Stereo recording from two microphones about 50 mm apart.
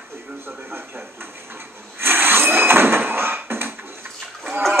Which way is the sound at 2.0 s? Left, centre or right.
Right.